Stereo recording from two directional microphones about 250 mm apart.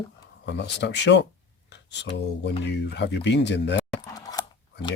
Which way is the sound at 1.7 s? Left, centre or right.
Left.